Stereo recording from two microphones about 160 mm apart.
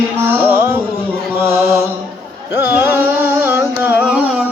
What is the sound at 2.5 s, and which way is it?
Carnatic music, 15° right (ahead or behind).